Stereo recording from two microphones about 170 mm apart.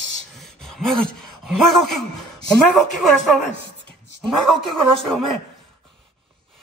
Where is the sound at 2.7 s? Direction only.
Centre (ahead or behind).